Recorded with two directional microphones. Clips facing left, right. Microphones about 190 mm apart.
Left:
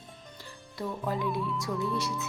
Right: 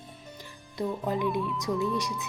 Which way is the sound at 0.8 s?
20° right (ahead or behind).